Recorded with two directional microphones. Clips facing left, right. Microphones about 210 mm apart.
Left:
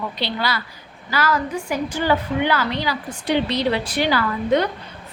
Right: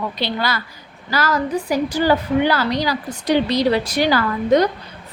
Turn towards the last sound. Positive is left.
turn(degrees=-40)  # may be behind; listen again after turning